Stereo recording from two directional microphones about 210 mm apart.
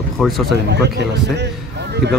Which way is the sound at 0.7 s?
55° right (ahead or behind).